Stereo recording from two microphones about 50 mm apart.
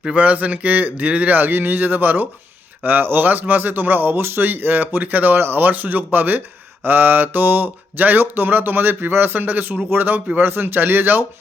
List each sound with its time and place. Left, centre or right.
0.2 s speech: right